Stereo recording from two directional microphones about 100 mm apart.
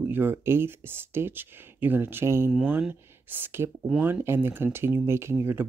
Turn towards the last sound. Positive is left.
turn(degrees=-25)  # may be behind; listen again after turning